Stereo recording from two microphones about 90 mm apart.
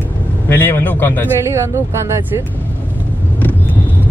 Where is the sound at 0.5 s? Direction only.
25° left (ahead or behind).